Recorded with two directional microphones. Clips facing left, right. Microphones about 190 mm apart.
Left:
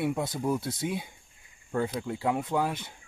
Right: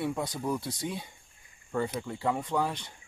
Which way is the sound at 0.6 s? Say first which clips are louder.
Left 3 dB; 5° left (ahead or behind).